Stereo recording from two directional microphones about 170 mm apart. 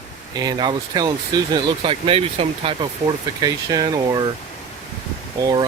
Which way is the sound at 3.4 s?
20° right (ahead or behind).